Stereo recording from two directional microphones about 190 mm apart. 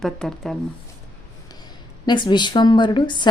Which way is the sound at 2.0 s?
25° left (ahead or behind).